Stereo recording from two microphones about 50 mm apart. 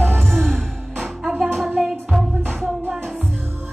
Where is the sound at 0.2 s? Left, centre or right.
Centre.